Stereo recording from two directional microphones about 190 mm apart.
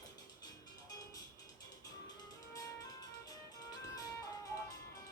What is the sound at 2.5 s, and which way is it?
Music, 20° left (ahead or behind).